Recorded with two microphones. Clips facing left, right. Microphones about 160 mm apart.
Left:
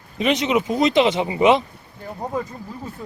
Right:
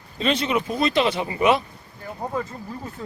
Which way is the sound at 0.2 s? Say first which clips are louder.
Left 3 dB; 15° left (ahead or behind).